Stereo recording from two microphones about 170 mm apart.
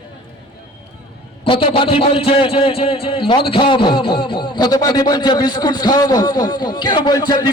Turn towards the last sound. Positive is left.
turn(degrees=20)  # may be behind; listen again after turning